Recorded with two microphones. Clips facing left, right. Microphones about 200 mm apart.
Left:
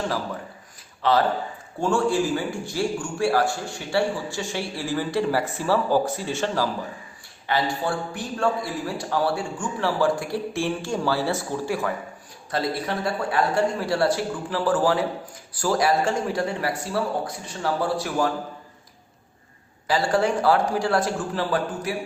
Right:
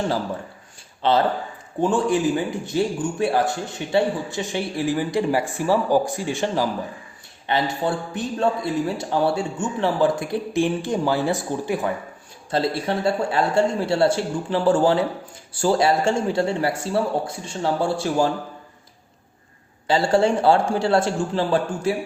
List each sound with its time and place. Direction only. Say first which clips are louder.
1.0 s a man's voice: right 1 dB; 25° right (ahead or behind)
19.9 s a man's voice: right 3 dB; 25° right (ahead or behind)